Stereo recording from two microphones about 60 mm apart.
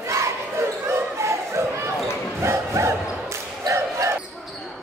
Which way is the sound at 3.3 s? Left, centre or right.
Right.